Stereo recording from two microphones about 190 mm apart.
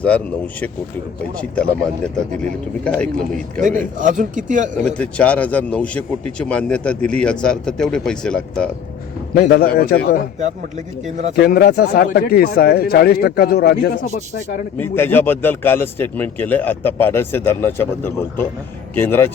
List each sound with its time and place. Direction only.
0.0 s a man's voice: 10° left (ahead or behind)
3.6 s a man's voice: 40° right (ahead or behind)
4.8 s a man's voice: 5° left (ahead or behind)
9.3 s a man's voice: 55° left (ahead or behind)
11.3 s speech: 55° left (ahead or behind)
14.8 s speech: 10° left (ahead or behind)